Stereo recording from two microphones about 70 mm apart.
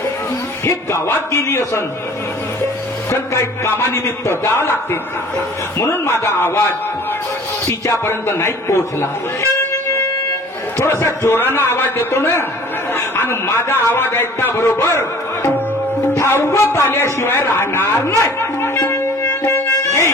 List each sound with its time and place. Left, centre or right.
1.0 s a man's voice: left
3.1 s a man's voice: left
5.8 s a man's voice: left
7.6 s a man's voice: left
10.9 s a man's voice: left
19.4 s music: left